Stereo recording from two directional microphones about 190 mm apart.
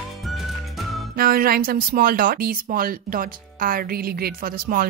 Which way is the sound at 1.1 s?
50° right (ahead or behind).